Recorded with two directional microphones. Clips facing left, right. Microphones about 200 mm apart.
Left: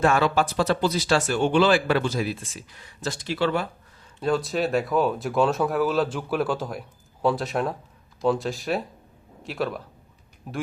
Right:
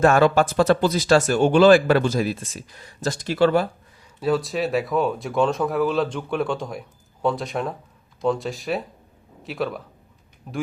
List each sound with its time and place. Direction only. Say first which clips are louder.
0.0 s speech: right 5 dB; 45° right (ahead or behind)
4.2 s speech: right 2 dB; centre (ahead or behind)